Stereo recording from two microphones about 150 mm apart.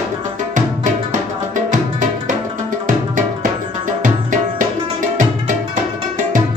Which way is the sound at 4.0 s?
60° right (ahead or behind).